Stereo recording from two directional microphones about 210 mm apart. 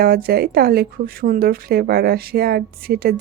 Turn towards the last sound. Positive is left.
turn(degrees=-45)  # may be behind; listen again after turning